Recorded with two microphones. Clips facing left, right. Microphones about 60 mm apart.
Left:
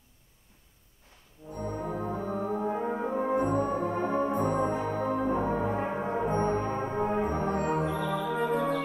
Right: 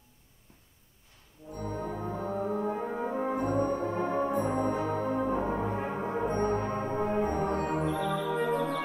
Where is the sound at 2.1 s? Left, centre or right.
Left.